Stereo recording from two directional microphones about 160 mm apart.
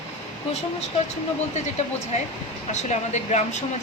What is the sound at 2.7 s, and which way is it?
Speech, 45° left (ahead or behind).